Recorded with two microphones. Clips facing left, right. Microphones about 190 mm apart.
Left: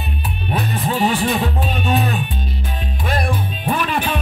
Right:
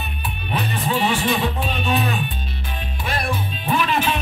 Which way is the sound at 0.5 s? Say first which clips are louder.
Left 2 dB; 40° left (ahead or behind).